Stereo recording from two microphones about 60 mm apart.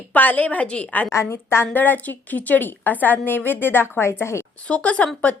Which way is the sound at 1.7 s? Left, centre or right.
Left.